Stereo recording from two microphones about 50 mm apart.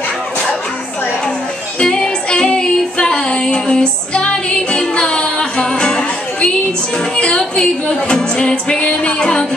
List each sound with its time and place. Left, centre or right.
1.8 s music: centre